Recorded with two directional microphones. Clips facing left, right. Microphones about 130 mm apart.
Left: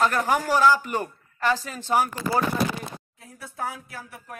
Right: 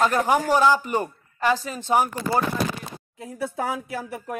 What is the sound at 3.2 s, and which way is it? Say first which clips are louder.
Speech: right 6 dB; 90° right.